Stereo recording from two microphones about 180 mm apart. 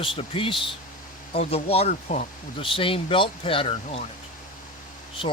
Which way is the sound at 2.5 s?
30° left (ahead or behind).